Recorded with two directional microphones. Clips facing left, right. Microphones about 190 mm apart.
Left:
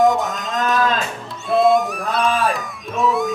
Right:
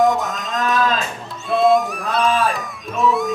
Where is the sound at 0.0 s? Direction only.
Centre (ahead or behind).